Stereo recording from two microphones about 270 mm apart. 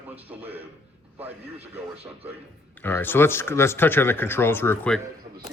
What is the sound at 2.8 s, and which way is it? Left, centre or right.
Speech, centre.